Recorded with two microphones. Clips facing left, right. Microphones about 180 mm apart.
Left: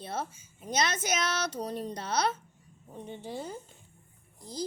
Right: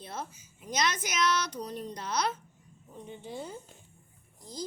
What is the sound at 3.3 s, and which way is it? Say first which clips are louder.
Speech: left 2 dB; 40° left (ahead or behind).